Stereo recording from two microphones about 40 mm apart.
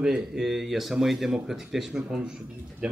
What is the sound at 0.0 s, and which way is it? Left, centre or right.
Speech, centre.